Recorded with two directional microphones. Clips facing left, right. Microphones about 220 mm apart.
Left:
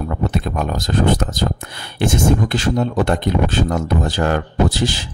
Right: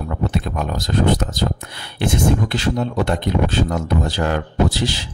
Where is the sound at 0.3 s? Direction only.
50° left (ahead or behind).